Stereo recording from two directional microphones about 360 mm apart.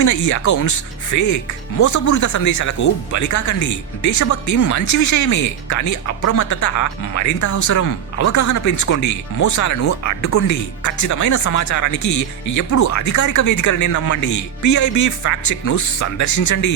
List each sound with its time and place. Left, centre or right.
0.0 s speech: left